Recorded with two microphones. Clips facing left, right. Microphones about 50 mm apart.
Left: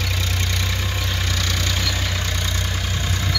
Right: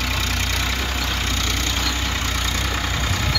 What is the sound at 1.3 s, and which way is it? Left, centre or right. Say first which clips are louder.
Vehicle: right 1 dB; right.